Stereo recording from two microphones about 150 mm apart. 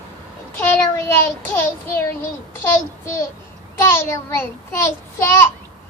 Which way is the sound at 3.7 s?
15° left (ahead or behind).